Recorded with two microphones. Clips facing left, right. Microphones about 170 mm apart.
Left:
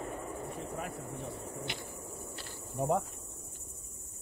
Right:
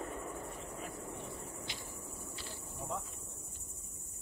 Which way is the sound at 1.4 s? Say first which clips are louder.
Left 6 dB; 65° left (ahead or behind).